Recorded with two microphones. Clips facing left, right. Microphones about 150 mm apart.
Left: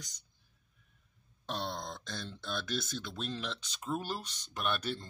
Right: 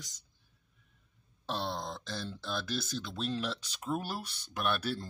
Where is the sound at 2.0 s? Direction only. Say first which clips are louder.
Right 3 dB; 5° right (ahead or behind).